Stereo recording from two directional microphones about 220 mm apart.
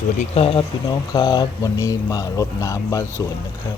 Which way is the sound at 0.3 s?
25° left (ahead or behind).